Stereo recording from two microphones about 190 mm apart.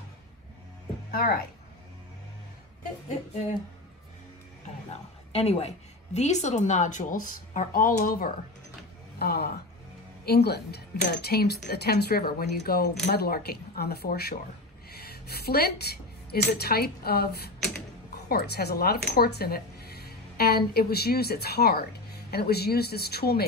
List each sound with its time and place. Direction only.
1.1 s speech: 50° left (ahead or behind)
5.3 s a woman's voice: 35° left (ahead or behind); by 17.3 s 55° left (ahead or behind)
18.3 s speech: 55° left (ahead or behind)